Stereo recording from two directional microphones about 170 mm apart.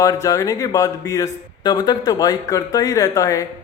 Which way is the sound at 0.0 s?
20° left (ahead or behind).